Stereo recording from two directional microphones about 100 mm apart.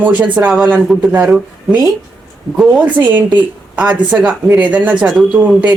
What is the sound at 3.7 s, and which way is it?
Speech, 15° right (ahead or behind).